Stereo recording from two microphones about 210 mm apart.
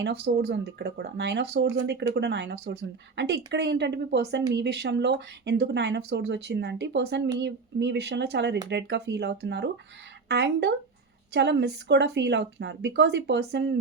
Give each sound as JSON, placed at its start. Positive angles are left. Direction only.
{"t": 0.0, "sound": "speech", "side_deg": -50}